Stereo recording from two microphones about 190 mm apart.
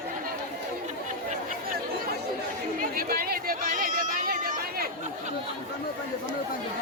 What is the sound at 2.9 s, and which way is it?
Chatter, 50° right (ahead or behind).